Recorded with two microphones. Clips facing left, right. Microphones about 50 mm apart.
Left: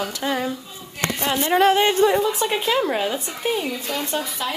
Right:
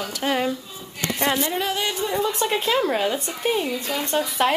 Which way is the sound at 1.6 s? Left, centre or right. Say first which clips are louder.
Left 9 dB; left.